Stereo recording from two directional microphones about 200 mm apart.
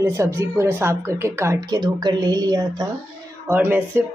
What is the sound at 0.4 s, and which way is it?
A woman's voice, 10° right (ahead or behind).